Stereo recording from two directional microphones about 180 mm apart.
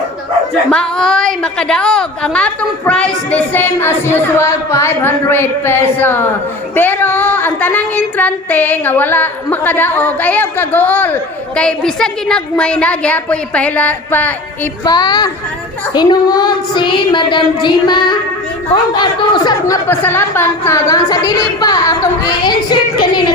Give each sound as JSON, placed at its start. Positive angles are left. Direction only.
{"t": 0.7, "sound": "female singing", "side_deg": 5}
{"t": 14.8, "sound": "a woman's voice", "side_deg": 25}